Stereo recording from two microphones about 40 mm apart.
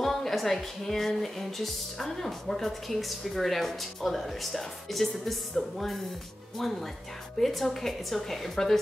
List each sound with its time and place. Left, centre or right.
0.0 s speech: centre
7.3 s a woman's voice: centre